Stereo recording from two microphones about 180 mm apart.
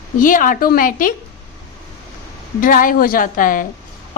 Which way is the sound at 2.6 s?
50° left (ahead or behind).